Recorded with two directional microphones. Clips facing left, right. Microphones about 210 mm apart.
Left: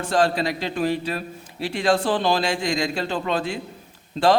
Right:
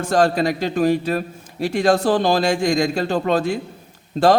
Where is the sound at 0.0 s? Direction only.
45° right (ahead or behind).